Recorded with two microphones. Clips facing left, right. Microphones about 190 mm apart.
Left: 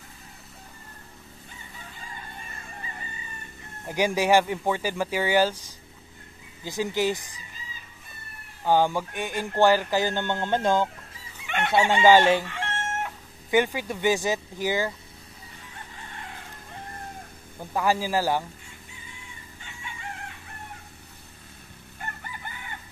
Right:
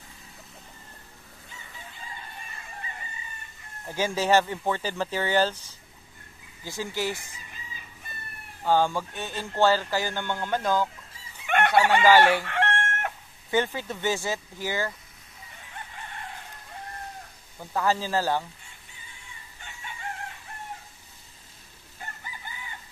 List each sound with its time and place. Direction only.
3.9 s speech: 15° left (ahead or behind)
8.6 s speech: 15° left (ahead or behind)
11.4 s speech: 55° right (ahead or behind)
12.0 s speech: 25° left (ahead or behind)
12.4 s chicken: 65° right (ahead or behind)
13.5 s speech: 15° left (ahead or behind)
17.6 s speech: 15° left (ahead or behind)
22.2 s chicken: 60° left (ahead or behind)